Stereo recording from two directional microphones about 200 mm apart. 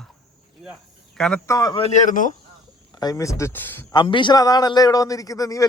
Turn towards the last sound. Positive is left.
turn(degrees=15)  # may be behind; listen again after turning